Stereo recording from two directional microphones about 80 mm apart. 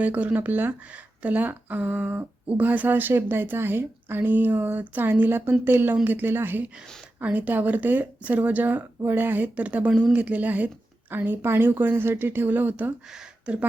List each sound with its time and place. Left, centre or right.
0.0 s speech: centre